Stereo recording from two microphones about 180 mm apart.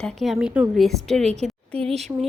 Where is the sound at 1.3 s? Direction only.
40° right (ahead or behind).